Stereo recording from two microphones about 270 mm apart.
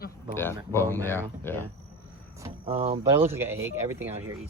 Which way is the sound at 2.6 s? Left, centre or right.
Right.